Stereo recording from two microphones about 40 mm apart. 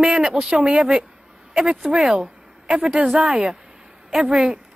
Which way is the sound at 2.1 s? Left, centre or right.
Centre.